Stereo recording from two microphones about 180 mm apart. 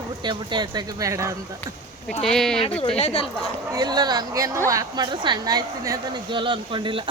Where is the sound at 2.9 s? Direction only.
35° left (ahead or behind).